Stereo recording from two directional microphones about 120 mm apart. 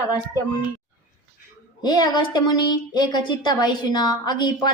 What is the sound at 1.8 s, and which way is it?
A woman's voice, 35° left (ahead or behind).